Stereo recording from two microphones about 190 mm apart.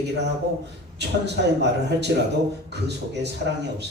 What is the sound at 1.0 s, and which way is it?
Speech, 60° right (ahead or behind).